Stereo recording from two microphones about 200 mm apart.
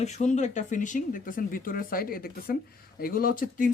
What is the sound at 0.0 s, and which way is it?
Speech, 35° left (ahead or behind).